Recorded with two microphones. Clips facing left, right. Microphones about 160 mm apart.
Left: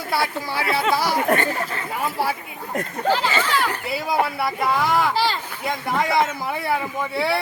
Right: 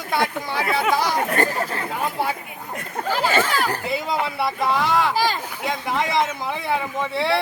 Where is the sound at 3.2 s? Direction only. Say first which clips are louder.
Right 2 dB; 45° right (ahead or behind).